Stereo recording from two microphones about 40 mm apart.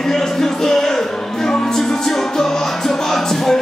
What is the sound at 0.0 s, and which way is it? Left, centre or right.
Music, centre.